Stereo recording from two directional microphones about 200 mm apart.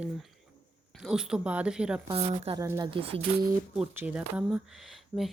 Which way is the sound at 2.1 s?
30° right (ahead or behind).